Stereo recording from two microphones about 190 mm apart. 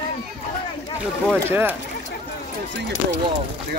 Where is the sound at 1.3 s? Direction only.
10° right (ahead or behind).